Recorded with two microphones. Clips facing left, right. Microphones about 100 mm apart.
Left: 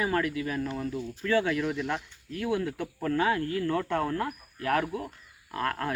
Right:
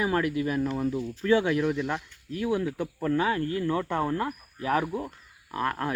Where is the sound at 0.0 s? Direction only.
10° right (ahead or behind).